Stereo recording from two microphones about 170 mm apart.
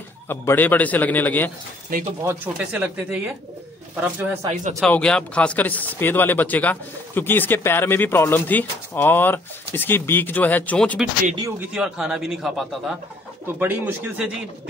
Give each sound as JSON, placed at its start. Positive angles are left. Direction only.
{"t": 0.3, "sound": "speech", "side_deg": 10}
{"t": 1.9, "sound": "speech", "side_deg": -55}
{"t": 2.2, "sound": "speech", "side_deg": -10}
{"t": 4.7, "sound": "speech", "side_deg": 5}
{"t": 11.7, "sound": "a man's voice", "side_deg": -5}